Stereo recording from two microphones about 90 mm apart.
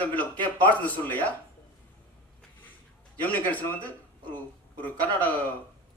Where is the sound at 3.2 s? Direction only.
20° left (ahead or behind).